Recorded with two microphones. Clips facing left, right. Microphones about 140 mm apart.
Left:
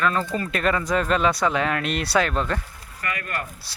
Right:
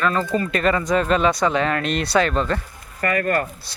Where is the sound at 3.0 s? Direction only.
45° right (ahead or behind).